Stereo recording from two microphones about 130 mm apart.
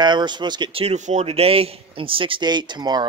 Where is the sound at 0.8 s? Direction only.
65° right (ahead or behind).